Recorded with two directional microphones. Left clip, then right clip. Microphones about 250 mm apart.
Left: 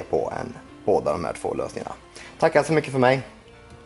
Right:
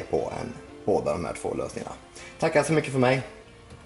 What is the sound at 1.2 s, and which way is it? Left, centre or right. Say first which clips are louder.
Speech: left 3 dB; centre.